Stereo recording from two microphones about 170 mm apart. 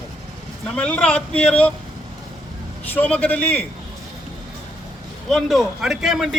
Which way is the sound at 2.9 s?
10° left (ahead or behind).